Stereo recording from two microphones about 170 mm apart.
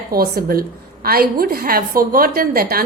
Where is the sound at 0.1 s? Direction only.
60° right (ahead or behind).